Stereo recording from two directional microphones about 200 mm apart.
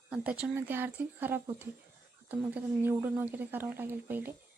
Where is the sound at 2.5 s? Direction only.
10° right (ahead or behind).